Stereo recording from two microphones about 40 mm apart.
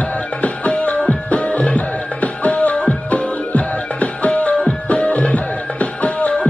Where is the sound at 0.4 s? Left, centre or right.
Left.